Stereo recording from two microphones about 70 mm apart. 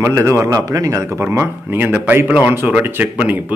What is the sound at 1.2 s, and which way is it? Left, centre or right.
Speech, right.